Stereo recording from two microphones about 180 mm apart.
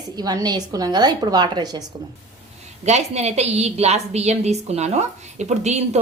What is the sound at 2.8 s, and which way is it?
A woman's voice, 40° right (ahead or behind).